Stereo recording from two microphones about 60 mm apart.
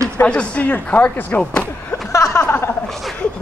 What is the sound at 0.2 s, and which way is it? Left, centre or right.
Speech, centre.